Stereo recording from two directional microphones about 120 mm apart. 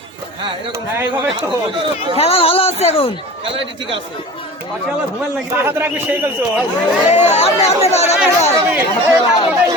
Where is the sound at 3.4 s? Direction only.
50° right (ahead or behind).